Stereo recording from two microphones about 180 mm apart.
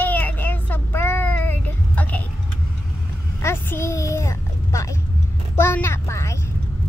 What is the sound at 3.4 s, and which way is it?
Speech, 15° left (ahead or behind).